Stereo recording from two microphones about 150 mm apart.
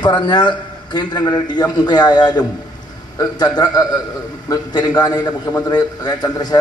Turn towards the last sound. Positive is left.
turn(degrees=25)  # may be behind; listen again after turning